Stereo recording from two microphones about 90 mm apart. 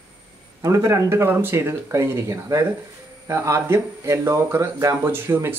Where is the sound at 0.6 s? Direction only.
35° right (ahead or behind).